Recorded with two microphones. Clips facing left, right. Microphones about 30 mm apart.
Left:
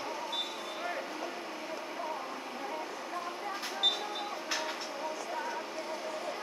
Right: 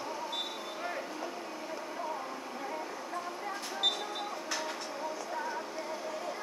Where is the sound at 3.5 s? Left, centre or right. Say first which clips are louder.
Left 1 dB; centre.